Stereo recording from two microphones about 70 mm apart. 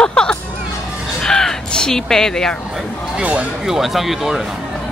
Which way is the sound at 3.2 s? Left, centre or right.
Right.